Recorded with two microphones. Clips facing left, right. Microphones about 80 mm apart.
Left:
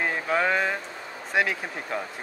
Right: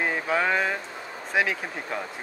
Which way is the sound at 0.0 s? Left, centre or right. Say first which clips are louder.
Even; centre.